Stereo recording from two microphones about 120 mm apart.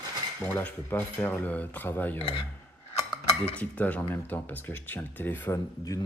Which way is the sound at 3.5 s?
15° left (ahead or behind).